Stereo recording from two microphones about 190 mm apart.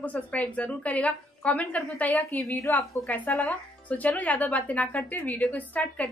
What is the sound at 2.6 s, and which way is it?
Speech, 15° left (ahead or behind).